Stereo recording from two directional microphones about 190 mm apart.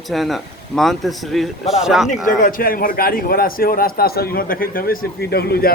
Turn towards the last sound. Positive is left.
turn(degrees=55)  # may be behind; listen again after turning